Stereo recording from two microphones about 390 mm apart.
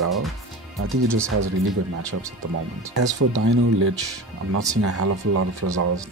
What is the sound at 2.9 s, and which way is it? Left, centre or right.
Speech, right.